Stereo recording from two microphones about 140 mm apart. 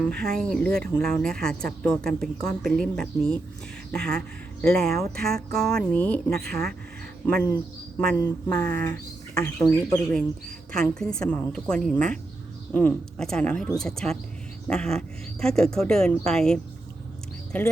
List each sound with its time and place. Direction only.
0.0 s a man's voice: 5° left (ahead or behind)
10.7 s speech: 5° left (ahead or behind)